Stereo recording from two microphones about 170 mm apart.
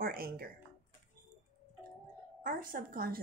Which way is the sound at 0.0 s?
60° right (ahead or behind).